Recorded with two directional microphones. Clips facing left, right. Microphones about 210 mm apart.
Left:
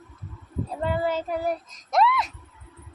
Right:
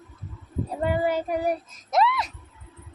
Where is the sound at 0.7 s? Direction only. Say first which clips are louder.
Right 2 dB; 15° right (ahead or behind).